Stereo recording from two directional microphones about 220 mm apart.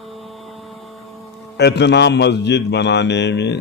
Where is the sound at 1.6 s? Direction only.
50° left (ahead or behind).